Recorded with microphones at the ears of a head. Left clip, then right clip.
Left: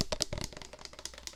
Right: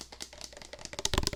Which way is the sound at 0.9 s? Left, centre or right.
Right.